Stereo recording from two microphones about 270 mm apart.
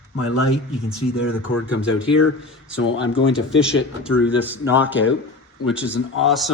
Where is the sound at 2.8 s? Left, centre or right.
Left.